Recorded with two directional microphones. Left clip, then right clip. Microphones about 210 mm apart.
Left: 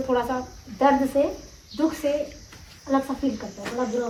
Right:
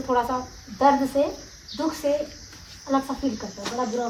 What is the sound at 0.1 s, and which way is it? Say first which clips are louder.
Speech: right 2 dB; 15° right (ahead or behind).